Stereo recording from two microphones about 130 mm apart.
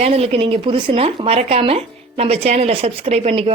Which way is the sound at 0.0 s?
50° right (ahead or behind).